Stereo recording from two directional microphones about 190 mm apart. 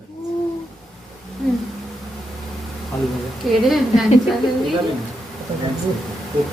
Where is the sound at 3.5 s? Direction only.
Centre (ahead or behind).